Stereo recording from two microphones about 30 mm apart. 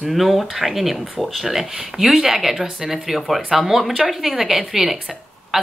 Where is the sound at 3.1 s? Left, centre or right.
Centre.